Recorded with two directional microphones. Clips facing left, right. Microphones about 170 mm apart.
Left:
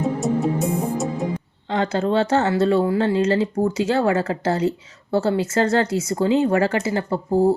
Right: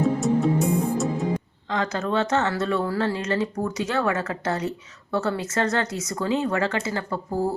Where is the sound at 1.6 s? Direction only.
30° left (ahead or behind).